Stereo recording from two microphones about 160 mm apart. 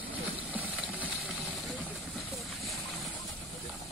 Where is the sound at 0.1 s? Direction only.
10° right (ahead or behind).